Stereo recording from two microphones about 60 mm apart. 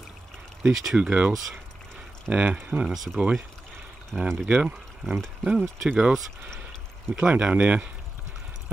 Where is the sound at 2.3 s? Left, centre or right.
Right.